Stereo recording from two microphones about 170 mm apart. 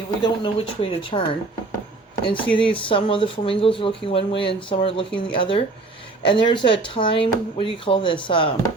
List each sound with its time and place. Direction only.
0.2 s speech: 30° left (ahead or behind)
2.5 s speech: 30° left (ahead or behind)